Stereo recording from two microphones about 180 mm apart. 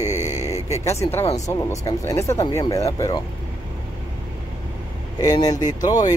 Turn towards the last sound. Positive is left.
turn(degrees=20)  # may be behind; listen again after turning